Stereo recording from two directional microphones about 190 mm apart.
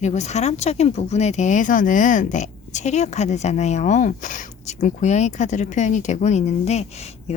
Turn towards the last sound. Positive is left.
turn(degrees=35)  # may be behind; listen again after turning